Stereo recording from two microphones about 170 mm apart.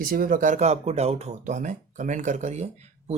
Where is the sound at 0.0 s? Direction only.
55° right (ahead or behind).